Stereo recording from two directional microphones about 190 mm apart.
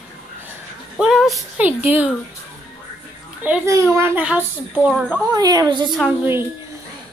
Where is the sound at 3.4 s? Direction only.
10° right (ahead or behind).